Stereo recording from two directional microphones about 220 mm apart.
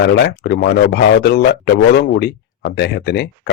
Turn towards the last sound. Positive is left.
turn(degrees=50)  # may be behind; listen again after turning